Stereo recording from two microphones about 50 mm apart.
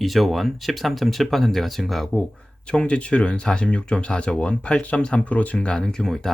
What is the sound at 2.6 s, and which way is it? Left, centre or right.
Speech, centre.